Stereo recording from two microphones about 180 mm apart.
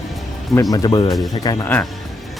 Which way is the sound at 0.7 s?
20° left (ahead or behind).